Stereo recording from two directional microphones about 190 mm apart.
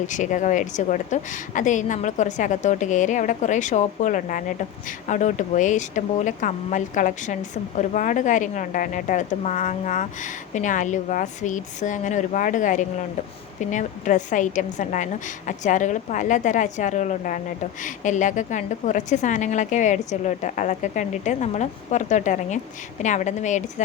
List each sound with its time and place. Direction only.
0.1 s speech: 40° left (ahead or behind)